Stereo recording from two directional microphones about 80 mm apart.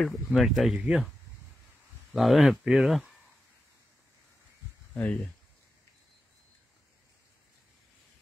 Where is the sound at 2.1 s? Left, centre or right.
Centre.